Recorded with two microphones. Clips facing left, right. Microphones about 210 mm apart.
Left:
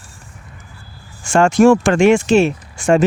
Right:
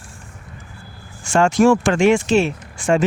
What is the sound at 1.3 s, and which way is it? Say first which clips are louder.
Speech: left 3 dB; 50° left (ahead or behind).